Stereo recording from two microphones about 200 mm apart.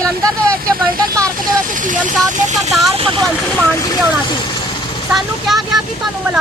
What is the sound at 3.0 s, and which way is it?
Vehicle, 25° right (ahead or behind).